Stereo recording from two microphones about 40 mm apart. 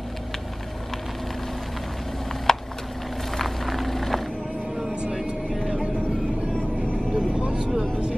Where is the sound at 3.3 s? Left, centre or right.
Centre.